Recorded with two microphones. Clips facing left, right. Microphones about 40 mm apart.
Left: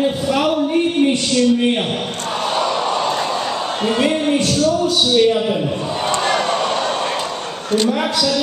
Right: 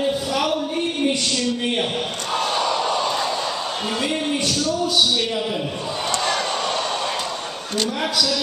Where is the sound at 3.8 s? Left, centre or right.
Left.